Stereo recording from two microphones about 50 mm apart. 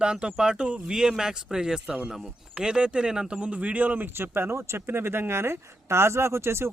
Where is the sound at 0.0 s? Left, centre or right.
Centre.